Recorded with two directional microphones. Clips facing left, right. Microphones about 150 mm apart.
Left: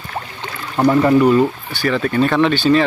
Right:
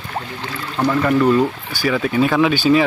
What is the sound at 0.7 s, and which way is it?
Speech, 20° left (ahead or behind).